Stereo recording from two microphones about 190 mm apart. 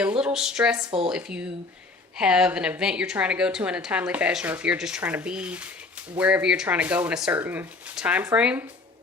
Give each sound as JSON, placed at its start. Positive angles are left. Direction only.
{"t": 0.0, "sound": "speech", "side_deg": -5}
{"t": 0.9, "sound": "speech", "side_deg": -25}
{"t": 1.1, "sound": "a woman's voice", "side_deg": -5}